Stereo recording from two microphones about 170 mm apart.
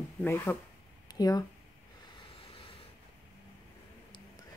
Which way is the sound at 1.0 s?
20° left (ahead or behind).